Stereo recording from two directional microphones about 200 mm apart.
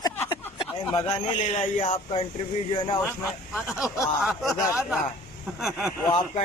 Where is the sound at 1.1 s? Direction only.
35° left (ahead or behind).